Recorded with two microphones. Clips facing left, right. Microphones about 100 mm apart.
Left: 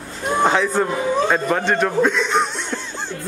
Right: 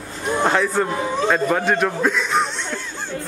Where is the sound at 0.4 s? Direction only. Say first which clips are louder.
Left 1 dB; centre (ahead or behind).